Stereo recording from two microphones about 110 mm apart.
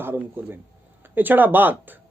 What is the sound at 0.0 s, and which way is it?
Speech, 20° right (ahead or behind).